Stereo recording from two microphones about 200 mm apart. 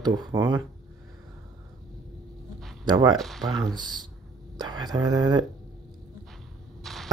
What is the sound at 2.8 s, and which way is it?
Speech, 20° right (ahead or behind).